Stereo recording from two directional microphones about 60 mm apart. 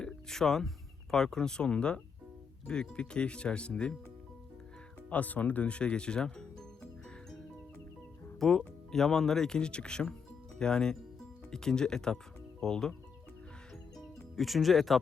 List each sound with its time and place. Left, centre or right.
0.0 s music: centre
1.1 s speech: centre
5.0 s speech: left
8.4 s speech: centre
14.0 s music: centre